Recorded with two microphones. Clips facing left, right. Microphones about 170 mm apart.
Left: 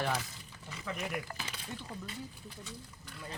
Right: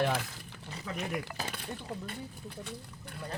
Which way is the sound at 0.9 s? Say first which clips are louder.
Right 5 dB; 65° right (ahead or behind).